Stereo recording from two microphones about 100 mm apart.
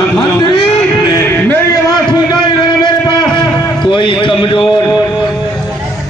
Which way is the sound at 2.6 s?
50° left (ahead or behind).